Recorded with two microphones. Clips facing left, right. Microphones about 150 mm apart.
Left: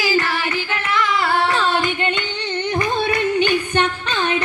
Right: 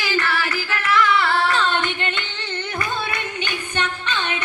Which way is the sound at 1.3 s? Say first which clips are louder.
Left 2 dB; 20° left (ahead or behind).